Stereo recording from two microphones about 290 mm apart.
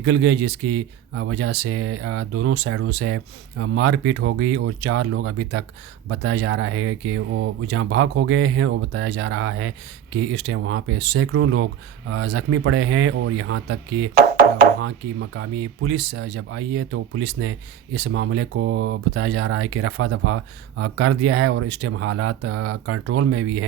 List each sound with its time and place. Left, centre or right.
0.0 s speech: right